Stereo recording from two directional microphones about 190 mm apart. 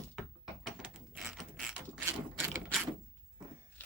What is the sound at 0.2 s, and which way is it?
Mechanisms, centre (ahead or behind).